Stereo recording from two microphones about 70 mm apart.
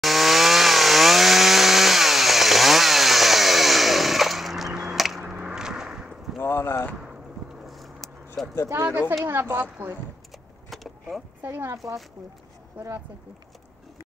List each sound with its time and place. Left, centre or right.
0.0 s chainsaw: centre
5.2 s vehicle: centre
6.4 s a sound: left
7.0 s a sound: centre
9.2 s a woman's voice: right
10.7 s vehicle: centre
11.4 s speech: right